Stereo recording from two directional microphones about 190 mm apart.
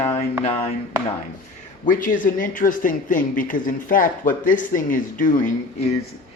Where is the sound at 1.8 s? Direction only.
45° left (ahead or behind).